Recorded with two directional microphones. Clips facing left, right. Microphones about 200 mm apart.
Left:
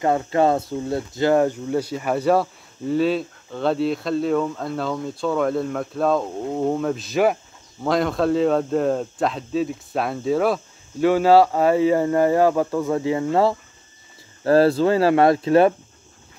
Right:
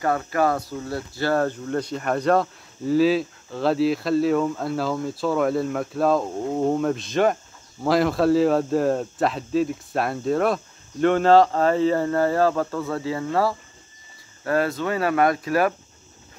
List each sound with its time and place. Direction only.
0.0 s speech: 25° left (ahead or behind)